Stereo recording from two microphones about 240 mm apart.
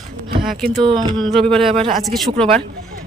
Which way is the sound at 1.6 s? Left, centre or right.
Right.